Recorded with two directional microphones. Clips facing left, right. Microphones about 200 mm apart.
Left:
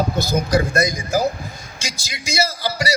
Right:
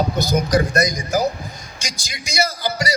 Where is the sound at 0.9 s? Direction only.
10° left (ahead or behind).